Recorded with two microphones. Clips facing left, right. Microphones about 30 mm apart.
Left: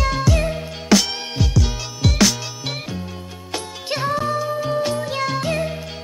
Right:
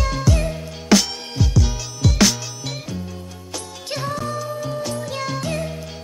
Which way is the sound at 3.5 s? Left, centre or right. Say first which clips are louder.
Left 4 dB; left.